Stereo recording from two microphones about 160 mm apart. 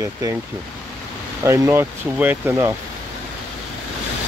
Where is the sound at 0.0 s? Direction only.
20° right (ahead or behind).